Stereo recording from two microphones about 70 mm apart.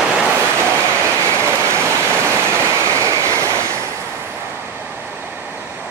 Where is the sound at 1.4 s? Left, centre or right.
Right.